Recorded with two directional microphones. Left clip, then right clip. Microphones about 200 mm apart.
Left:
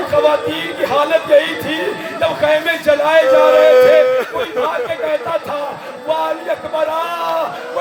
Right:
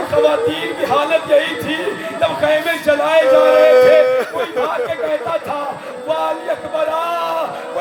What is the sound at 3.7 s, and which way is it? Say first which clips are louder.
Speech: left 1 dB; 10° right (ahead or behind).